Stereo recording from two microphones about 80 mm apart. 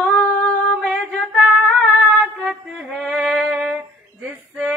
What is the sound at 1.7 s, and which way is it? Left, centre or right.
Female singing, centre.